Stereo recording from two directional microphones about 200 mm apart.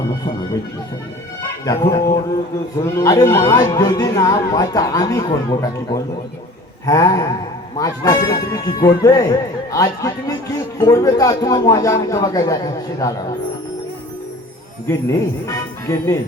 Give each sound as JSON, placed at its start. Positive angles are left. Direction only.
{"t": 1.4, "sound": "a man's voice", "side_deg": 15}
{"t": 14.8, "sound": "a man's voice", "side_deg": 15}